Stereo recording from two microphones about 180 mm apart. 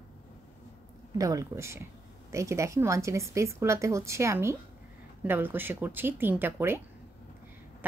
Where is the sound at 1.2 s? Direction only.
20° right (ahead or behind).